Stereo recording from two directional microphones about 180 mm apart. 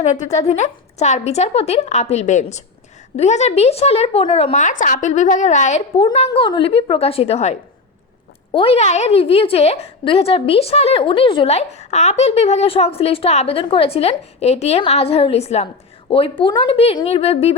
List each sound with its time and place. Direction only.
0.1 s a woman's voice: 40° left (ahead or behind)
6.0 s a woman's voice: 30° left (ahead or behind)
8.5 s a woman's voice: 35° left (ahead or behind)